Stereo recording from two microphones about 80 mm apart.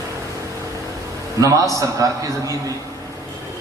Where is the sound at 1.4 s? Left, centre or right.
Right.